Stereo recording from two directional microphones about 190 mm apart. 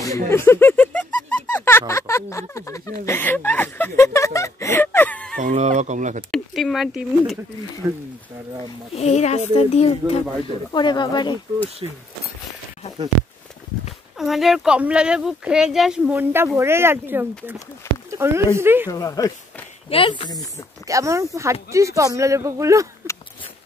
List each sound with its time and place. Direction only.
0.3 s a sound: 10° left (ahead or behind)
5.4 s speech: 40° right (ahead or behind)
6.3 s speech: centre (ahead or behind)
7.8 s speech: 15° right (ahead or behind)
8.9 s speech: 35° left (ahead or behind)
10.7 s speech: 25° left (ahead or behind)
11.8 s speech: 25° right (ahead or behind)
14.1 s speech: centre (ahead or behind)
18.9 s speech: 20° left (ahead or behind)
20.8 s speech: 15° right (ahead or behind)